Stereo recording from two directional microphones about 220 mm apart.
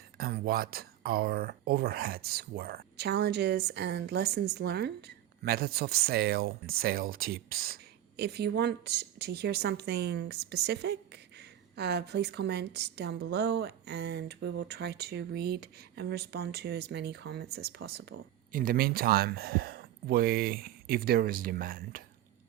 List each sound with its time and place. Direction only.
0.2 s speech: 45° right (ahead or behind)